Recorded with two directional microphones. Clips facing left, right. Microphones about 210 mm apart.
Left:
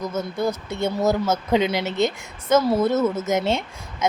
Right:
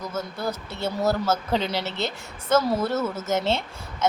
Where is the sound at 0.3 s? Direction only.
5° right (ahead or behind).